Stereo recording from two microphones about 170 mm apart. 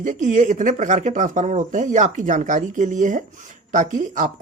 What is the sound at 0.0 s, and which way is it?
Speech, 45° right (ahead or behind).